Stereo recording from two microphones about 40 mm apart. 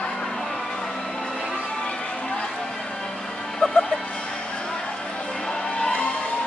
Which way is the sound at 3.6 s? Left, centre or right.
Left.